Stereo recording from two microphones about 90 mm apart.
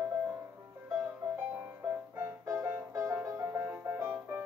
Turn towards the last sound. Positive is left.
turn(degrees=-25)  # may be behind; listen again after turning